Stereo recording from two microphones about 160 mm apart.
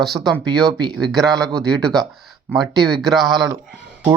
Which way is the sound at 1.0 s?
Centre (ahead or behind).